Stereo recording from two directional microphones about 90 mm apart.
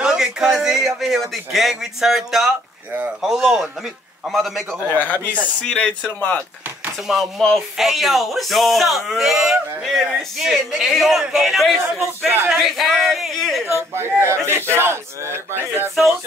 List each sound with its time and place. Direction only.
0.0 s a man's voice: 10° right (ahead or behind)
4.8 s speech: 20° left (ahead or behind)
7.1 s speech: centre (ahead or behind)
13.7 s a man's voice: 30° right (ahead or behind)